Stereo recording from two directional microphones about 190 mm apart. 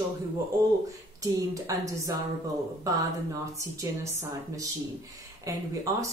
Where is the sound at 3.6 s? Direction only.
15° right (ahead or behind).